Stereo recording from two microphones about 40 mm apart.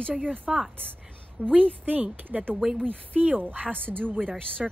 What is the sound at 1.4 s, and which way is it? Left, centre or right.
Speech, right.